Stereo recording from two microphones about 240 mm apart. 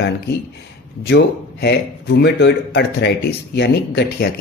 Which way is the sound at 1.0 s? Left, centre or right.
Left.